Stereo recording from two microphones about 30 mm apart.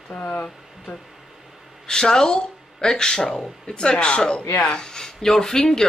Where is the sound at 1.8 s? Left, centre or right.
Left.